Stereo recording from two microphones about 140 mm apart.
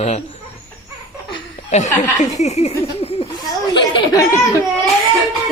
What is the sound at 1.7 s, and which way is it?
Speech, 55° left (ahead or behind).